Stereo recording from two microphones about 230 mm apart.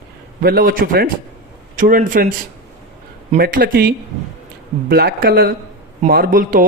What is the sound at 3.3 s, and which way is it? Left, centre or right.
A man's voice, right.